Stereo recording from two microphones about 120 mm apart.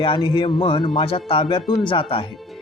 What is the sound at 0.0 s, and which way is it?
Speech, 45° left (ahead or behind).